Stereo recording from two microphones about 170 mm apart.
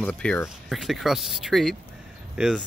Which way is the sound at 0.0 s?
5° left (ahead or behind).